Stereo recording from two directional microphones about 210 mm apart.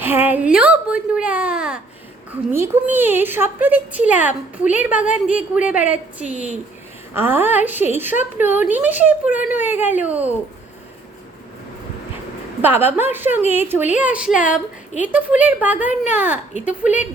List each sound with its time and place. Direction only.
0.0 s a sound: 10° right (ahead or behind)
2.3 s a woman's voice: 10° right (ahead or behind)
12.6 s a woman's voice: 10° right (ahead or behind)
16.6 s a woman's voice: 35° left (ahead or behind)